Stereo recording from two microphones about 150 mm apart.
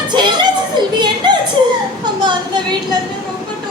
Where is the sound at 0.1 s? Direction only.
30° right (ahead or behind).